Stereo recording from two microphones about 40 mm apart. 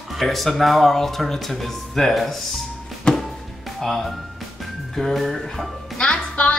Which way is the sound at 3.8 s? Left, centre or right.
Centre.